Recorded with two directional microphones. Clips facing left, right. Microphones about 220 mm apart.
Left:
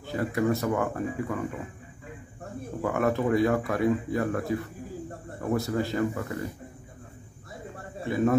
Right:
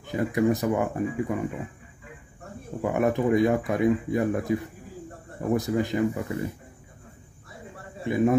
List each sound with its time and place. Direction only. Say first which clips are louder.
0.0 s speech: right 3 dB; 15° right (ahead or behind)
2.8 s speech: right 2 dB; 20° right (ahead or behind)
8.0 s a man's voice: right 2 dB; 15° right (ahead or behind)